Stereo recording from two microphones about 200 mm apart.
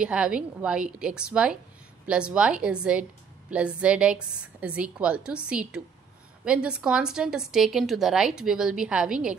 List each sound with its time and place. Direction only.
0.0 s a woman's voice: 5° right (ahead or behind)